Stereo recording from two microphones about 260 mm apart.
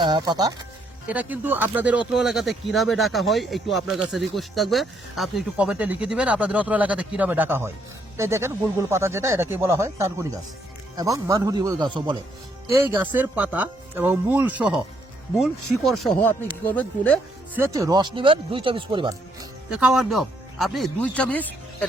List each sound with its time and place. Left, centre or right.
0.0 s speech: centre
17.5 s speech: centre
19.7 s speech: centre